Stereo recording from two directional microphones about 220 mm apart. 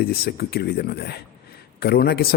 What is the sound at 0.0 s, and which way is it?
A man's voice, 45° left (ahead or behind).